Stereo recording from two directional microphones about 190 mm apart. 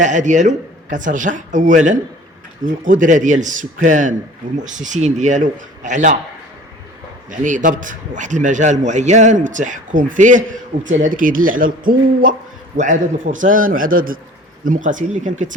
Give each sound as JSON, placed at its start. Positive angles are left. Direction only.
{"t": 0.0, "sound": "speech", "side_deg": -40}
{"t": 7.3, "sound": "a man's voice", "side_deg": -45}